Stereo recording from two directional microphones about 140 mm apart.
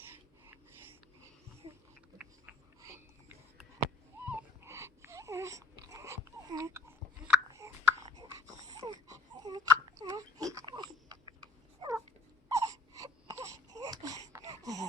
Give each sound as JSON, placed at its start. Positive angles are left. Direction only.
{"t": 1.6, "sound": "a sound", "side_deg": -40}
{"t": 4.3, "sound": "dog", "side_deg": -20}
{"t": 9.0, "sound": "baby cry", "side_deg": -25}
{"t": 10.7, "sound": "a sound", "side_deg": -30}
{"t": 12.5, "sound": "baby cry", "side_deg": -25}
{"t": 14.3, "sound": "wheeze", "side_deg": -25}